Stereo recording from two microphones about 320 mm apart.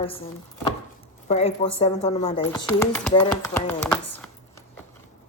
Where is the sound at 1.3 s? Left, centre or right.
Centre.